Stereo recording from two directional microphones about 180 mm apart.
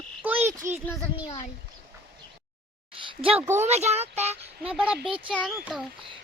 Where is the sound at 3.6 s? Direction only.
35° right (ahead or behind).